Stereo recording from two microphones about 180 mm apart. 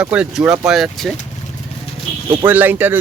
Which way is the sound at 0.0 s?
5° right (ahead or behind).